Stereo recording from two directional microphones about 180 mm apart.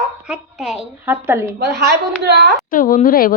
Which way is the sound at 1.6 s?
70° right (ahead or behind).